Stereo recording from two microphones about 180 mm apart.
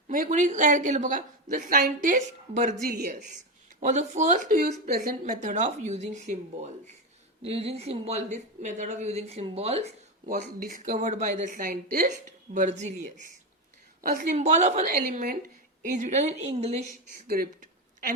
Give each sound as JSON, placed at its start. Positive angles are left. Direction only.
{"t": 0.1, "sound": "a woman's voice", "side_deg": -45}
{"t": 12.5, "sound": "a woman's voice", "side_deg": -40}
{"t": 14.3, "sound": "a woman's voice", "side_deg": -40}
{"t": 17.2, "sound": "a sound", "side_deg": -55}